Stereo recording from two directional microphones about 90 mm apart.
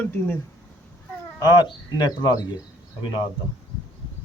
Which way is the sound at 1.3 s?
45° left (ahead or behind).